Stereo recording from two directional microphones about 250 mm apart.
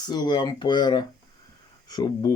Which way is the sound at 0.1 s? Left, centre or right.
Centre.